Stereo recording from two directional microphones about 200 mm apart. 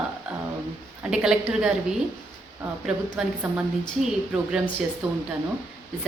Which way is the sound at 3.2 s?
5° right (ahead or behind).